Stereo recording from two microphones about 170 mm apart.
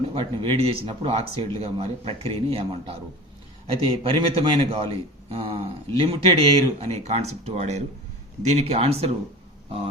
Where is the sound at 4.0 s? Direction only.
30° right (ahead or behind).